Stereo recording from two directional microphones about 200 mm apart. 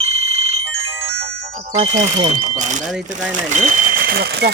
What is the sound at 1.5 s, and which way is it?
Speech, 35° right (ahead or behind).